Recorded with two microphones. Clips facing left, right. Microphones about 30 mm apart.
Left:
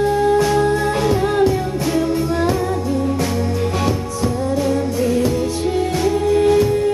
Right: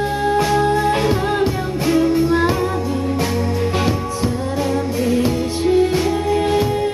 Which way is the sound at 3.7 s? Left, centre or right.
Right.